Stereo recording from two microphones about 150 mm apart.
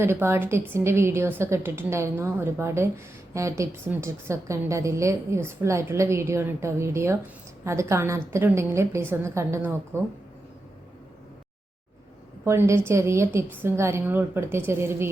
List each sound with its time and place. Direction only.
0.0 s a woman's voice: 15° right (ahead or behind)
12.5 s a woman's voice: 15° right (ahead or behind)